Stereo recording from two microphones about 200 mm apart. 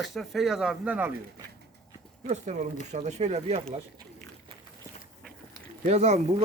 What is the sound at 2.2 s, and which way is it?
Speech, 35° right (ahead or behind).